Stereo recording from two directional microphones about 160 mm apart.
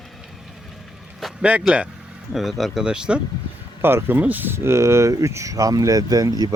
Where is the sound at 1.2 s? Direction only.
5° right (ahead or behind).